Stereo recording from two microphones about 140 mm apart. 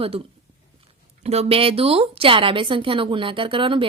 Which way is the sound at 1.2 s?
50° right (ahead or behind).